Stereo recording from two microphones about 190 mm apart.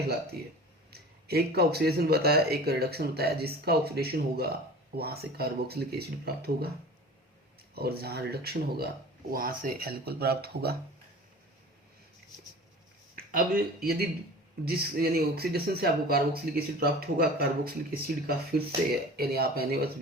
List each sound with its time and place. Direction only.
0.9 s speech: 55° right (ahead or behind)
7.8 s speech: 55° right (ahead or behind)
13.1 s speech: 50° right (ahead or behind)